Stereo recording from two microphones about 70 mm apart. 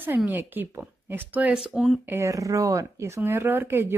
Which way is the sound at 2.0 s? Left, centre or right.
Right.